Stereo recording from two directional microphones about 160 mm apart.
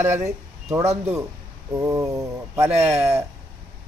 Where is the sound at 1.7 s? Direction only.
20° right (ahead or behind).